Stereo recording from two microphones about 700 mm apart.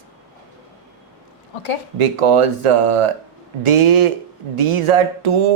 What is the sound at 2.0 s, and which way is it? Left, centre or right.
A man's voice, right.